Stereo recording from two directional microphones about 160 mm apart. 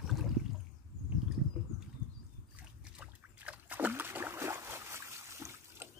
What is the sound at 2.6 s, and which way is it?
Boat, 10° right (ahead or behind).